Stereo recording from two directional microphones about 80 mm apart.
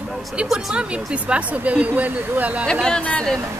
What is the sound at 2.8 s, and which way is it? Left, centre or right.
Speech, centre.